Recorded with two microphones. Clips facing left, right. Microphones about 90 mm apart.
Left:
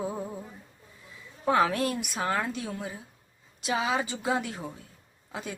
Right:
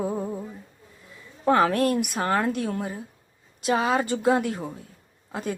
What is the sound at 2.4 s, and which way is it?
A woman's voice, 55° right (ahead or behind).